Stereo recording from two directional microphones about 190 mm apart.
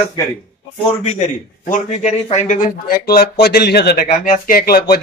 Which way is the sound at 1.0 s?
40° left (ahead or behind).